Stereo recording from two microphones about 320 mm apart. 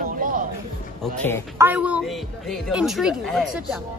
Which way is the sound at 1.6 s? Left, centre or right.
Centre.